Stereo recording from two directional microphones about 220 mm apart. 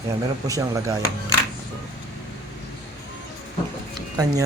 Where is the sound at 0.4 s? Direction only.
15° right (ahead or behind).